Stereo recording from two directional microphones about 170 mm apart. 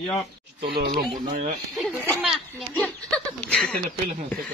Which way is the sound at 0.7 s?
75° right (ahead or behind).